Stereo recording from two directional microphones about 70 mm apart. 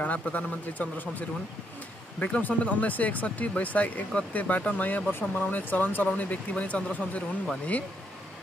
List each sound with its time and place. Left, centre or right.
0.0 s speech: left